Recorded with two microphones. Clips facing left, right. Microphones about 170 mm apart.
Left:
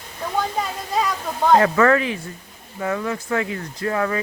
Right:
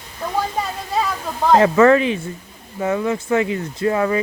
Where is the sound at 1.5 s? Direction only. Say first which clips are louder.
Right 4 dB; 20° right (ahead or behind).